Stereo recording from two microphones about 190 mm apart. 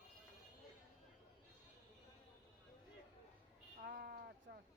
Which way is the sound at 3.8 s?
55° right (ahead or behind).